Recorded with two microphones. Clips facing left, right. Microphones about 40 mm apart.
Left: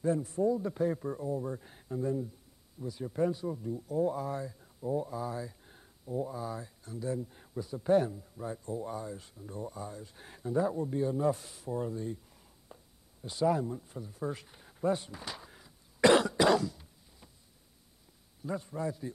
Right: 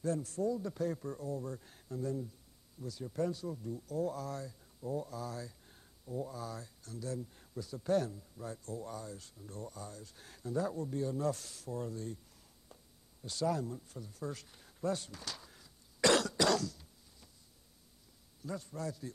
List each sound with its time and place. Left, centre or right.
0.0 s speech: centre
12.7 s a sound: left
18.4 s speech: left